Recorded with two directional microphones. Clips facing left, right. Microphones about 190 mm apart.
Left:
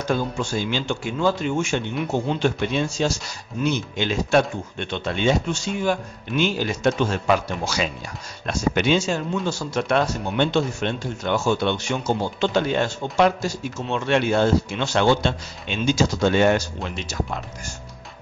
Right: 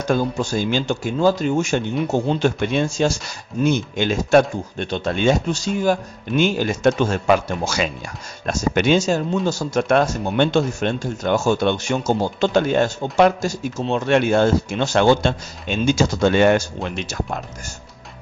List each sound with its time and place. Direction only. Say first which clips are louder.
0.0 s speech: right 4 dB; 45° right (ahead or behind)
2.4 s speech: right 3 dB; 50° right (ahead or behind)